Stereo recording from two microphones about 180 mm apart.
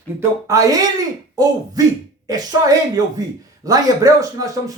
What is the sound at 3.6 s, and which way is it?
Speech, 20° right (ahead or behind).